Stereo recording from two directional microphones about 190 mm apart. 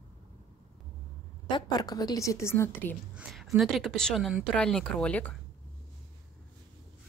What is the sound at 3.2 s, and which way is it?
A woman's voice, centre (ahead or behind).